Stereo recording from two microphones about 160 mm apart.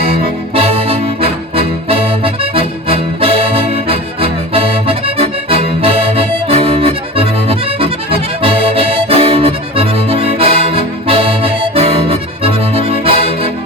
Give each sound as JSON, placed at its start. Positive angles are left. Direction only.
{"t": 0.5, "sound": "music", "side_deg": -35}